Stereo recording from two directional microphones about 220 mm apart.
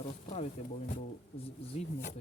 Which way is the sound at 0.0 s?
30° left (ahead or behind).